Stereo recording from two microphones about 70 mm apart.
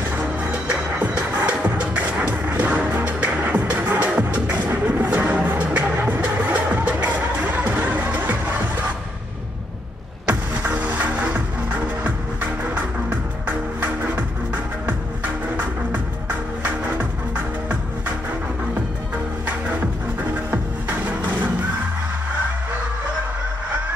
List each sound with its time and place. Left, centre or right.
0.2 s music: right
10.7 s music: right
13.5 s music: right